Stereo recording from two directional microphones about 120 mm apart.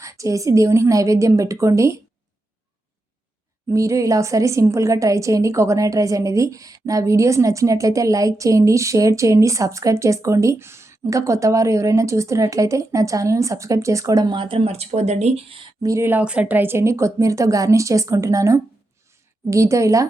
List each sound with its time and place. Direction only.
0.0 s a woman's voice: 25° right (ahead or behind)
3.7 s a woman's voice: 25° right (ahead or behind)
14.3 s speech: 45° right (ahead or behind); by 15.5 s 65° right (ahead or behind)
15.8 s a woman's voice: 25° right (ahead or behind)